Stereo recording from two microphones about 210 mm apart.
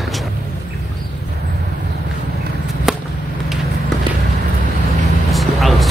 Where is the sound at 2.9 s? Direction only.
Centre (ahead or behind).